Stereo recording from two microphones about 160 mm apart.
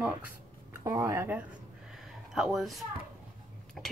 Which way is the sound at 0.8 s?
15° right (ahead or behind).